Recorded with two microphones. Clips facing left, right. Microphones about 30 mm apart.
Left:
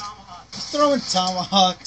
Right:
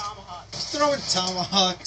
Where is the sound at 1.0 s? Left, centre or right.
Left.